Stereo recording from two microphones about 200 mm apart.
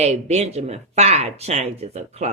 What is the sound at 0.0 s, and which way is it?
Speech, 35° right (ahead or behind).